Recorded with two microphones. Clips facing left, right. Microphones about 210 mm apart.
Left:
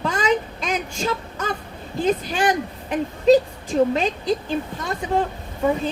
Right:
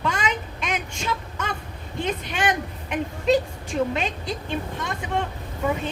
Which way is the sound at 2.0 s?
35° left (ahead or behind).